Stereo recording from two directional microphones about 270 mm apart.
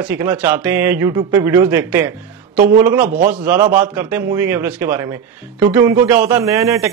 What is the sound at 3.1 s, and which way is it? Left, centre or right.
Speech, right.